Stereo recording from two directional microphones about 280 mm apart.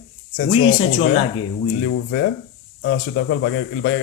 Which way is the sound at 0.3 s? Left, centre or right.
Left.